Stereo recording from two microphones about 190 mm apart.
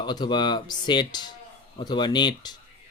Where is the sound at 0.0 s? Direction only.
25° left (ahead or behind).